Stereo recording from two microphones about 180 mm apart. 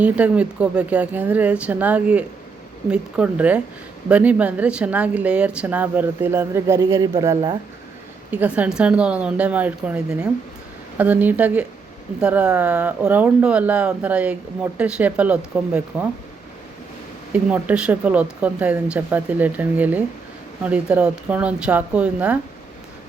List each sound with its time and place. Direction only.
0.0 s speech: 5° right (ahead or behind)
17.3 s speech: 5° right (ahead or behind)